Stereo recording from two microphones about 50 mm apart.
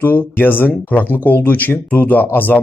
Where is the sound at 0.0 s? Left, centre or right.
Left.